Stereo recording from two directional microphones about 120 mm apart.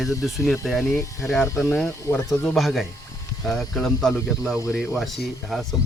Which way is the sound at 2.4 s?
Centre (ahead or behind).